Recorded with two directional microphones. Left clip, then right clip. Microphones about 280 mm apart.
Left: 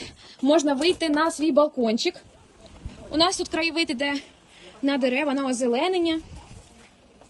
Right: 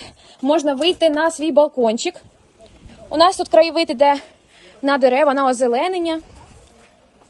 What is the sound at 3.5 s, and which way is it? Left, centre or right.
Speech, centre.